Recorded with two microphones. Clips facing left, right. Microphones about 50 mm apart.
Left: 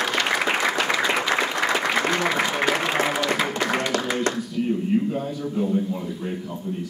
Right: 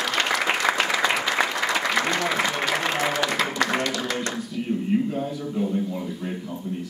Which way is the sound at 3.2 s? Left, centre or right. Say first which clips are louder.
Left 1 dB; centre.